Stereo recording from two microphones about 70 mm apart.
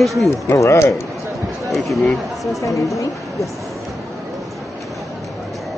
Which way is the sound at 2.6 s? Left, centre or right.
Left.